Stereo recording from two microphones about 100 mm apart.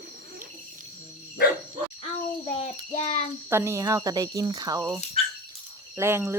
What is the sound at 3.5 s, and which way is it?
Speech, 25° right (ahead or behind).